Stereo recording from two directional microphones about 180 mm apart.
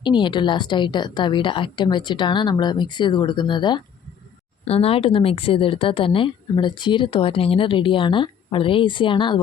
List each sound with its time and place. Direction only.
0.0 s a woman's voice: 25° left (ahead or behind)